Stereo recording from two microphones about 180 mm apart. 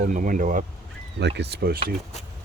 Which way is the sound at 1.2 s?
70° right (ahead or behind).